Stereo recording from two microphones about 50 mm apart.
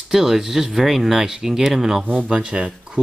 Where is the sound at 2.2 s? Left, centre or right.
Right.